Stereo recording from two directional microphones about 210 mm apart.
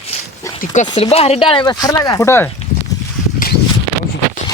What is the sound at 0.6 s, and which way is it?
Speech, 35° left (ahead or behind).